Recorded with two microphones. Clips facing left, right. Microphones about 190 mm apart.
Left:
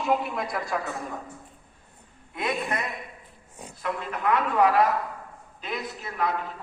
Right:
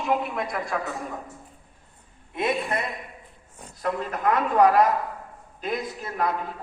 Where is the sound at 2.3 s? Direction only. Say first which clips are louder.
Right 3 dB; 25° right (ahead or behind).